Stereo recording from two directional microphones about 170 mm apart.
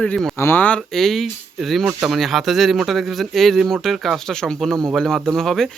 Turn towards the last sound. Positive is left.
turn(degrees=0)  # may be behind; listen again after turning